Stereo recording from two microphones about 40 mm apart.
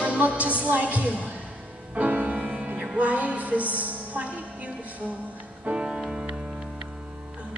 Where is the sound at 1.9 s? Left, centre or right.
Right.